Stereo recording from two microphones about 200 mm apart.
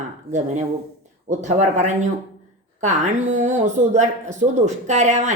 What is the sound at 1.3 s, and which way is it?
Speech, 35° right (ahead or behind).